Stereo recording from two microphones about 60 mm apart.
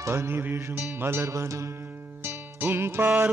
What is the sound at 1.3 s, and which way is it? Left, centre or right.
Mantra, right.